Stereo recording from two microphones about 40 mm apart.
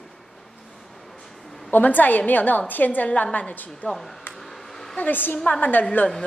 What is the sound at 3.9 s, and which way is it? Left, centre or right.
Speech, centre.